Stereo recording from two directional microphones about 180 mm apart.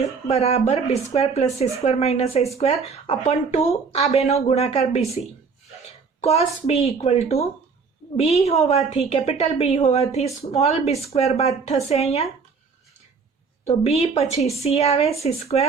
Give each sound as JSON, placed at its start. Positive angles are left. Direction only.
{"t": 0.3, "sound": "speech", "side_deg": 35}
{"t": 6.2, "sound": "speech", "side_deg": 35}
{"t": 13.7, "sound": "speech", "side_deg": 35}